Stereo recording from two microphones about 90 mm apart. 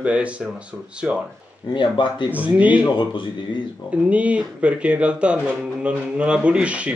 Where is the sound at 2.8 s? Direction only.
60° left (ahead or behind).